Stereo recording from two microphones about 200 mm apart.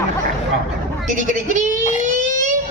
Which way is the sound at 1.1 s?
40° right (ahead or behind).